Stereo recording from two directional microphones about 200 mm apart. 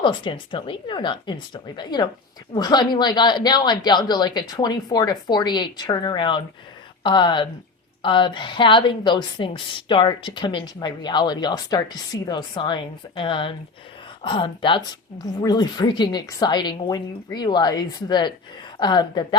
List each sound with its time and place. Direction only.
0.0 s a woman's voice: 25° left (ahead or behind)